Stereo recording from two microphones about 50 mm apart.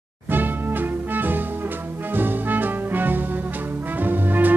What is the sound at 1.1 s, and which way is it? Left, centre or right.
Music, right.